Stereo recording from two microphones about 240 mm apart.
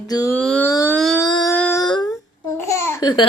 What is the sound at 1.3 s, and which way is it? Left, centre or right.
Speech, centre.